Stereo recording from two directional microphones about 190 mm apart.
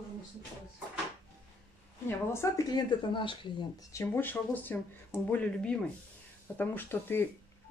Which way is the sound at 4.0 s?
10° left (ahead or behind).